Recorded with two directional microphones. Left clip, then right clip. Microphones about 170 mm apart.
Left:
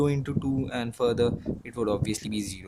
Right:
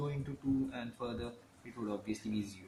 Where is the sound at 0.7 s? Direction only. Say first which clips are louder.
Left 15 dB; 80° left.